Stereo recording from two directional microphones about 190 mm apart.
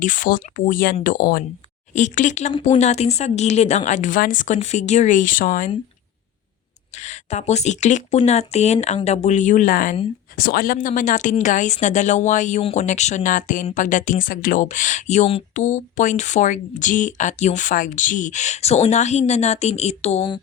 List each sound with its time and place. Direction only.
0.0 s speech: 45° left (ahead or behind)
1.9 s speech: 40° left (ahead or behind)
6.9 s speech: 35° left (ahead or behind)